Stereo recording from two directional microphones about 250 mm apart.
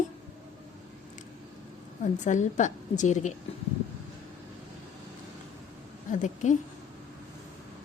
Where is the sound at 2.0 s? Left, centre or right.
Left.